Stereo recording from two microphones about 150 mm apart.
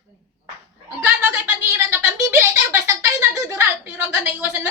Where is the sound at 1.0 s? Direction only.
15° right (ahead or behind).